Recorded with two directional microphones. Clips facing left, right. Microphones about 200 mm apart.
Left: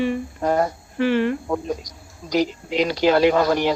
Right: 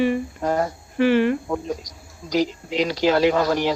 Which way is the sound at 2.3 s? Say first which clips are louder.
Left 1 dB; 55° left (ahead or behind).